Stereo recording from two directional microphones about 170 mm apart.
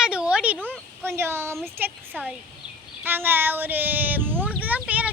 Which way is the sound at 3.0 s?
10° right (ahead or behind).